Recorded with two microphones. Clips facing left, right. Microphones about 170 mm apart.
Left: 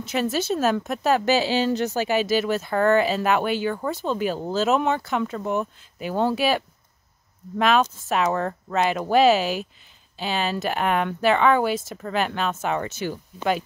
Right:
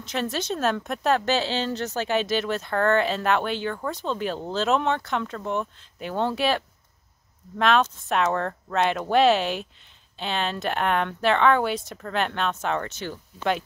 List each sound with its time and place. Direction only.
0.0 s a woman's voice: 5° left (ahead or behind)